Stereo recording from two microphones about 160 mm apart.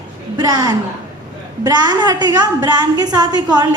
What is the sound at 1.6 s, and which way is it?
A woman's voice, 25° right (ahead or behind).